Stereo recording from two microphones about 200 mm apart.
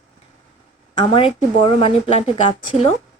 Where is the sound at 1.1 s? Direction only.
25° left (ahead or behind).